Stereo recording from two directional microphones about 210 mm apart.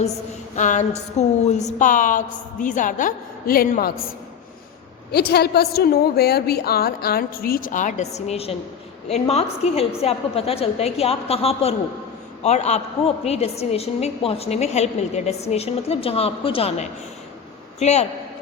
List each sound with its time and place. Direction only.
0.5 s a woman's voice: 35° left (ahead or behind)
5.1 s a woman's voice: 50° left (ahead or behind); by 18.0 s 30° left (ahead or behind)